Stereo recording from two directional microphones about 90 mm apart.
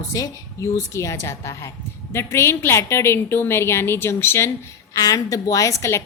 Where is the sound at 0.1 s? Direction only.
40° left (ahead or behind).